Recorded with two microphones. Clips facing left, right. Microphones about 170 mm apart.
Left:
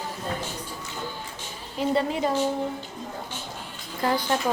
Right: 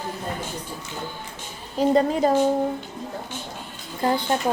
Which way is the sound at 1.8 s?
40° right (ahead or behind).